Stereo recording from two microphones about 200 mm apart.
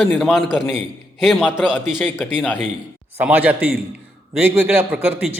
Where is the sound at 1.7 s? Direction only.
10° left (ahead or behind).